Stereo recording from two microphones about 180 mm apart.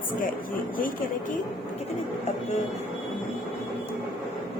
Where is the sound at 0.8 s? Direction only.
50° left (ahead or behind).